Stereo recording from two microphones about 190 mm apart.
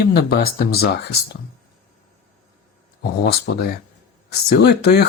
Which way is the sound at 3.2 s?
55° left (ahead or behind).